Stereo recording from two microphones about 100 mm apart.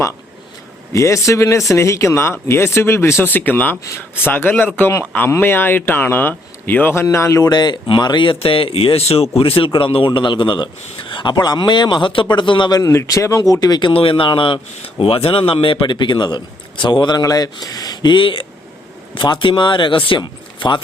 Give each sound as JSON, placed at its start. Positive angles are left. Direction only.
{"t": 0.9, "sound": "speech", "side_deg": 30}
{"t": 7.4, "sound": "a man's voice", "side_deg": 45}
{"t": 9.4, "sound": "a man's voice", "side_deg": 65}
{"t": 12.8, "sound": "speech", "side_deg": 30}
{"t": 13.9, "sound": "a man's voice", "side_deg": 65}
{"t": 17.2, "sound": "a man's voice", "side_deg": 40}